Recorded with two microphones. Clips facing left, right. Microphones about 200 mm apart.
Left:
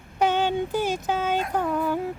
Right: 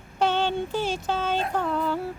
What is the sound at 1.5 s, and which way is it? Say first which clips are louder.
Music: left 1 dB; 10° left (ahead or behind).